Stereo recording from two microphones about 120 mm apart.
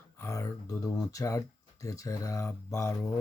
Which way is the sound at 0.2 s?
25° left (ahead or behind).